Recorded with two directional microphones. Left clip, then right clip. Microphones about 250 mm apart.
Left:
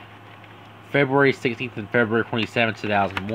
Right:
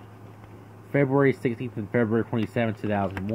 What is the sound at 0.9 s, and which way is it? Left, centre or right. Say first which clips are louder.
Speech: left 4 dB; centre.